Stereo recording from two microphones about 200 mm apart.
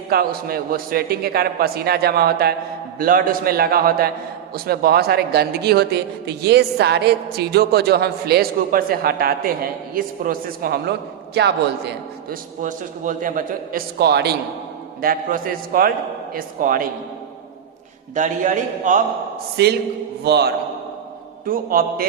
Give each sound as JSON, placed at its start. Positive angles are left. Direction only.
{"t": 0.1, "sound": "a man's voice", "side_deg": -50}
{"t": 12.3, "sound": "speech", "side_deg": -40}
{"t": 18.1, "sound": "a man's voice", "side_deg": -40}
{"t": 19.6, "sound": "a man's voice", "side_deg": -55}